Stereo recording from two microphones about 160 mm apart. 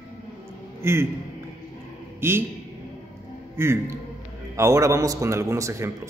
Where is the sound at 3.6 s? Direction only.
15° right (ahead or behind).